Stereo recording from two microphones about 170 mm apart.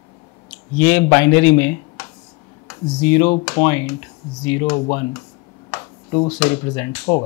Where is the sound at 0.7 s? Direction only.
10° left (ahead or behind).